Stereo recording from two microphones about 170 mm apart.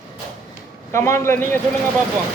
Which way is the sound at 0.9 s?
15° left (ahead or behind).